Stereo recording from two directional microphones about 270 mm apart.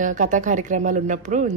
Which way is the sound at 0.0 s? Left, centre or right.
Right.